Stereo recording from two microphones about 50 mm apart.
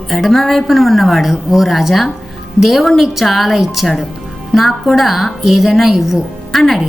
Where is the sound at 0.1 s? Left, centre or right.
Centre.